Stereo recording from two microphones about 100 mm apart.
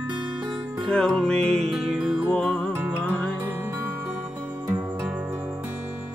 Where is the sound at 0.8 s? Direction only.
10° left (ahead or behind).